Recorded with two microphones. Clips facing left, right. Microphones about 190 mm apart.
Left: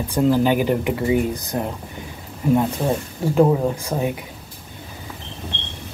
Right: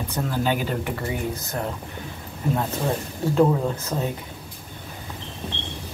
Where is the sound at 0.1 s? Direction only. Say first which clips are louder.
Left 9 dB; 15° left (ahead or behind).